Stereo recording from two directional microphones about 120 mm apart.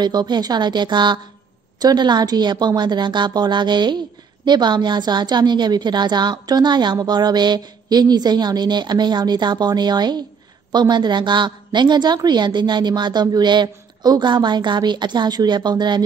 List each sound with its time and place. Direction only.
0.0 s a woman's voice: 35° right (ahead or behind)